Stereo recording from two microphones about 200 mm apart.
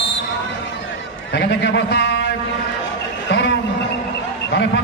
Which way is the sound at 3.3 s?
60° left (ahead or behind).